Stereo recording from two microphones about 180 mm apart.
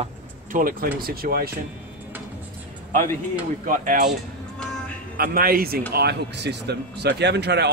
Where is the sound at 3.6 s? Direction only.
45° right (ahead or behind).